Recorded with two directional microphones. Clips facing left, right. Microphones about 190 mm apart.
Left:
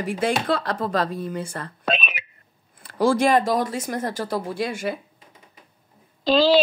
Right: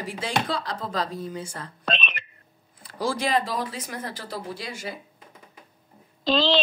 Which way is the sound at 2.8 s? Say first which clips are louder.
Left 8 dB; 55° left (ahead or behind).